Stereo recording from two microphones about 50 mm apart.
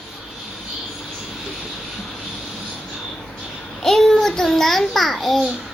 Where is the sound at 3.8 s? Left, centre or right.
Centre.